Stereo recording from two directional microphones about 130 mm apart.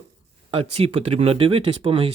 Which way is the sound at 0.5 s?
50° right (ahead or behind).